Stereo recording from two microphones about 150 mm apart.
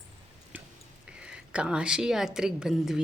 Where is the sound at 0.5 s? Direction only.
10° right (ahead or behind).